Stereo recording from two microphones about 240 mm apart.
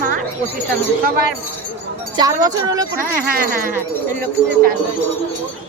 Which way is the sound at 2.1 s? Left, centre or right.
Centre.